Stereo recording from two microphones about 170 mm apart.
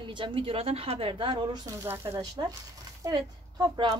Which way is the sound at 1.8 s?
15° right (ahead or behind).